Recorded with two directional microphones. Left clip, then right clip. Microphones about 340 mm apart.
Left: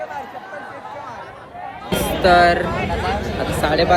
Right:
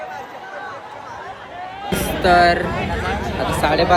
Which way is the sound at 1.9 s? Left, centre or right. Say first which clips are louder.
Left 1 dB; centre.